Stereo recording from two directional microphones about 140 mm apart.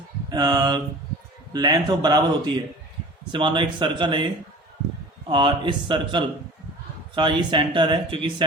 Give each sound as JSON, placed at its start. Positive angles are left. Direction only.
{"t": 0.3, "sound": "speech", "side_deg": -30}
{"t": 5.3, "sound": "speech", "side_deg": -35}